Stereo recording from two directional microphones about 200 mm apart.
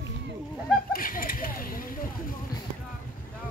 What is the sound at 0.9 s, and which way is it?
Speech, 45° left (ahead or behind).